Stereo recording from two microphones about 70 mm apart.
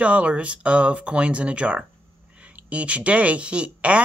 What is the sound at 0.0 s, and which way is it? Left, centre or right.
Speech, centre.